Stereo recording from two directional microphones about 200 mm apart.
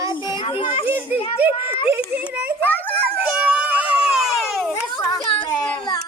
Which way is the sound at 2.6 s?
10° left (ahead or behind).